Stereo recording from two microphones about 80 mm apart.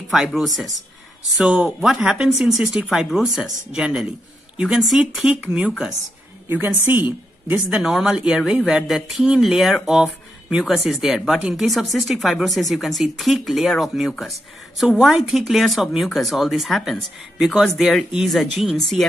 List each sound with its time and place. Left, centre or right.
0.1 s speech: centre
6.9 s a woman's voice: right
7.7 s speech: centre